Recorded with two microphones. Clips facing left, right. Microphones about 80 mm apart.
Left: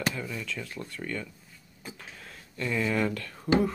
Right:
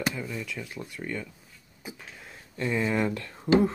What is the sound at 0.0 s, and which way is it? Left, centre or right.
Speech, centre.